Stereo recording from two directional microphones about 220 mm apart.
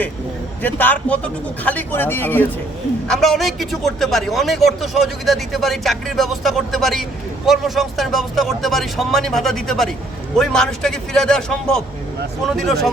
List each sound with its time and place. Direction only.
0.6 s a man's voice: 5° left (ahead or behind)